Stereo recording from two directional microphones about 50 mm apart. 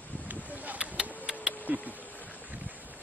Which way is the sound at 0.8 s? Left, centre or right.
Centre.